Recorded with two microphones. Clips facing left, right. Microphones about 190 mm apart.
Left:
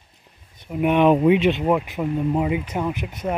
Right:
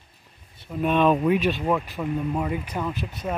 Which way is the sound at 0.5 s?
15° left (ahead or behind).